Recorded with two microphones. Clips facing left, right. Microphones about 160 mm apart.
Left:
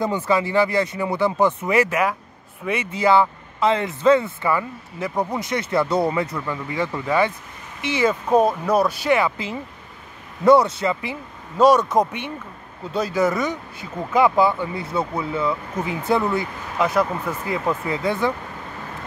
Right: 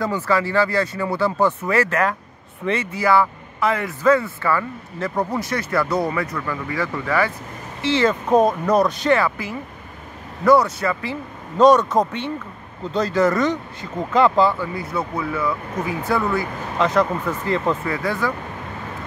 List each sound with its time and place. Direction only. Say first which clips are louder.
0.0 s speech: even; 20° left (ahead or behind)
9.2 s speech: even; 20° left (ahead or behind)
11.5 s speech: right 1 dB; 10° left (ahead or behind)
14.6 s speech: left 1 dB; 25° left (ahead or behind)
16.7 s speech: right 1 dB; 10° left (ahead or behind)
17.8 s speech: left 1 dB; 20° left (ahead or behind)